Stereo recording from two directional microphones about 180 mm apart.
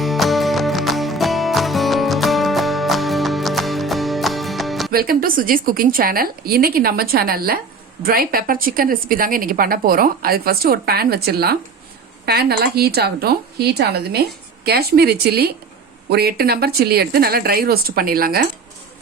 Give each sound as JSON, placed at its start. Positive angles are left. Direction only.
{"t": 0.0, "sound": "music", "side_deg": 0}
{"t": 4.9, "sound": "speech", "side_deg": -55}